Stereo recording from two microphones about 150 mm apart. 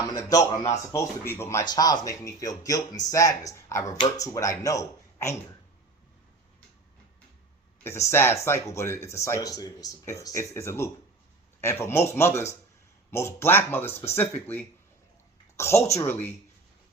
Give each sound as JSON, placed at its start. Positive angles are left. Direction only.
{"t": 0.0, "sound": "speech", "side_deg": 25}
{"t": 7.9, "sound": "speech", "side_deg": 20}